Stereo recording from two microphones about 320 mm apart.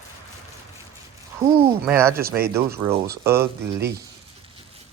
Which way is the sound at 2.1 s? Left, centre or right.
Right.